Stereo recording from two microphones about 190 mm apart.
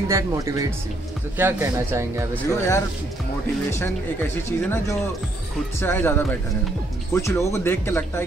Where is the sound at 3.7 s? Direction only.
15° left (ahead or behind).